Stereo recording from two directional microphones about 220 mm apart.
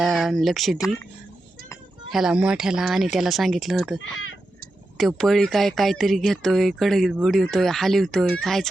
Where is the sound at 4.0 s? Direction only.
65° left (ahead or behind).